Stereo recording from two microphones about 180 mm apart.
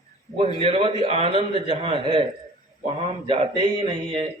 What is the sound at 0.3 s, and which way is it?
A man's voice, 30° right (ahead or behind).